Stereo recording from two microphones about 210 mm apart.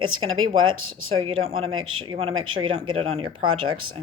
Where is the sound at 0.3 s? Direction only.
75° right (ahead or behind).